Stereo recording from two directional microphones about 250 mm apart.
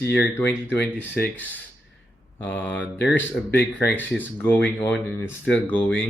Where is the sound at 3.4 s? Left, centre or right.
Left.